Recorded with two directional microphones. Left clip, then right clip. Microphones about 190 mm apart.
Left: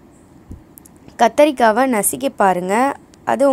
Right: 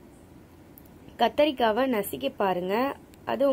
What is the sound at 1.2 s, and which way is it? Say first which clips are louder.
A woman's voice: left 10 dB; 35° left (ahead or behind).